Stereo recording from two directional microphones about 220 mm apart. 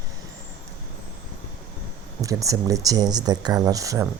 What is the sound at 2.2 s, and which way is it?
Speech, 15° right (ahead or behind).